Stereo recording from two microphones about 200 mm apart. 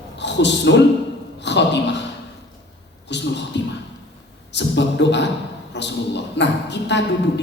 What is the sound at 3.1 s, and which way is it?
A woman's voice, 60° left (ahead or behind).